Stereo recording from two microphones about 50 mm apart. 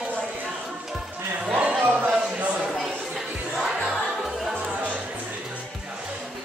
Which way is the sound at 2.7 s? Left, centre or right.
Centre.